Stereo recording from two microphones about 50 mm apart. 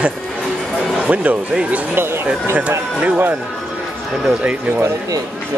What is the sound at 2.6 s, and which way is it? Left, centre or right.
Speech, right.